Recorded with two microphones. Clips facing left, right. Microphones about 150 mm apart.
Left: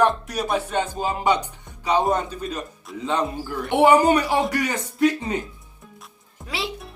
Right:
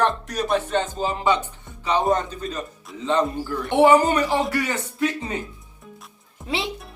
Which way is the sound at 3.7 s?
15° left (ahead or behind).